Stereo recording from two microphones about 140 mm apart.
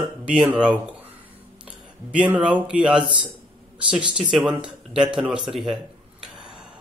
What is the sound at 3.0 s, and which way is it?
A man's voice, 35° right (ahead or behind).